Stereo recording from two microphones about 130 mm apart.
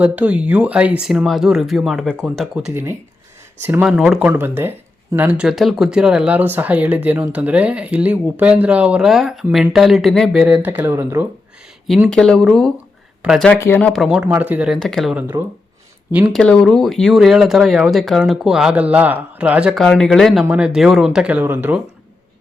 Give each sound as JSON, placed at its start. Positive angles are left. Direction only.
{"t": 0.0, "sound": "speech", "side_deg": -10}
{"t": 3.6, "sound": "speech", "side_deg": -15}
{"t": 3.8, "sound": "speech", "side_deg": -5}
{"t": 4.3, "sound": "speech", "side_deg": -15}
{"t": 10.4, "sound": "speech", "side_deg": -10}
{"t": 12.0, "sound": "speech", "side_deg": 5}
{"t": 13.5, "sound": "speech", "side_deg": 15}
{"t": 13.9, "sound": "speech", "side_deg": -5}
{"t": 16.3, "sound": "speech", "side_deg": 5}
{"t": 19.8, "sound": "speech", "side_deg": 5}